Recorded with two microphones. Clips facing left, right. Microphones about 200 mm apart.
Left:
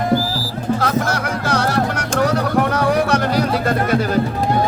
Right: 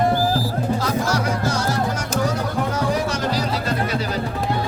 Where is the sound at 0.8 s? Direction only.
60° left (ahead or behind).